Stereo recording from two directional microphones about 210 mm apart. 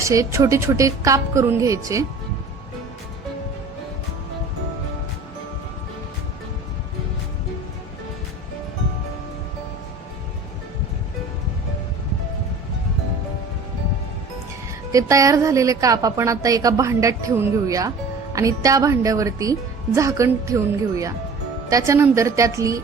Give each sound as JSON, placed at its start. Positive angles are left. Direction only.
{"t": 0.0, "sound": "a woman's voice", "side_deg": -15}
{"t": 14.9, "sound": "a woman's voice", "side_deg": -15}